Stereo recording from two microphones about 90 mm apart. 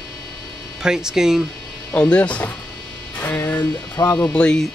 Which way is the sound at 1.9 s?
15° left (ahead or behind).